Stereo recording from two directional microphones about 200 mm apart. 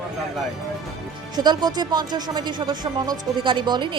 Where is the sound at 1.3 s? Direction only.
20° right (ahead or behind).